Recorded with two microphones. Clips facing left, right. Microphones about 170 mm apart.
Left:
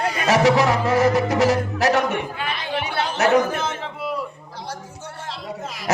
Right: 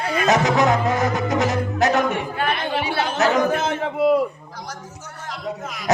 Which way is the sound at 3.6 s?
55° right (ahead or behind).